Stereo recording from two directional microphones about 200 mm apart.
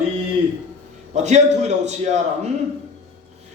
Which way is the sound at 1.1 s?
35° right (ahead or behind).